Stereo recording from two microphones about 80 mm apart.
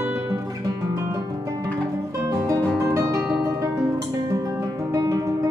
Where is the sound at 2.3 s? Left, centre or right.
Right.